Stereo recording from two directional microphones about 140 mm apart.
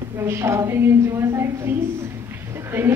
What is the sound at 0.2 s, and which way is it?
A woman's voice, 20° right (ahead or behind).